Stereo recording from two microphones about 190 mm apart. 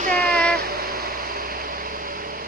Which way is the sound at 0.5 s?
55° right (ahead or behind).